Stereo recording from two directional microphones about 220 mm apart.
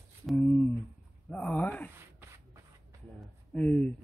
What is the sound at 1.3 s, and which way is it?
Speech, 5° left (ahead or behind).